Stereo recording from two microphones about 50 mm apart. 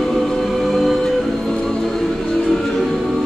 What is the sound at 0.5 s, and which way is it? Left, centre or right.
Music, centre.